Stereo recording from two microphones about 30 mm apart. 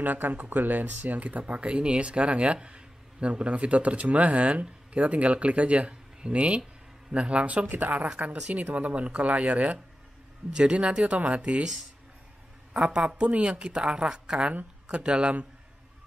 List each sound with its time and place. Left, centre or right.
0.0 s speech: right
1.5 s a woman's voice: right
7.6 s speech: right
8.5 s speech: right
10.5 s a woman's voice: right
11.1 s speech: right
12.7 s a woman's voice: right